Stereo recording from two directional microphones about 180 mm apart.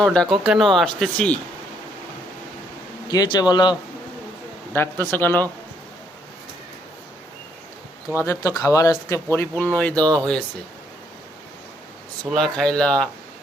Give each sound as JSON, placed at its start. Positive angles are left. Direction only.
{"t": 0.0, "sound": "speech", "side_deg": 5}
{"t": 3.1, "sound": "speech", "side_deg": 20}
{"t": 4.7, "sound": "speech", "side_deg": 10}
{"t": 8.2, "sound": "speech", "side_deg": 15}
{"t": 12.2, "sound": "speech", "side_deg": 0}